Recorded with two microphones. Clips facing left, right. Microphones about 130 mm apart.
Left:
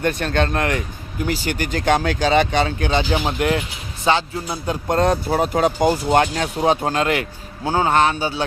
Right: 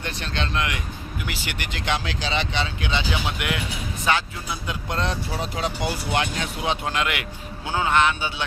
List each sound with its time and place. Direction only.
0.0 s speech: 50° left (ahead or behind)